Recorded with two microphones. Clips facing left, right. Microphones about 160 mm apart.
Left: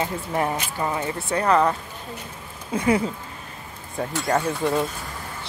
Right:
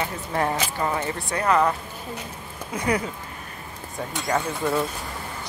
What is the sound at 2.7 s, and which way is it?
Speech, 30° left (ahead or behind).